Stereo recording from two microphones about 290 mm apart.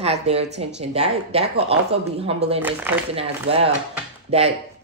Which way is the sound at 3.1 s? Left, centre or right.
Centre.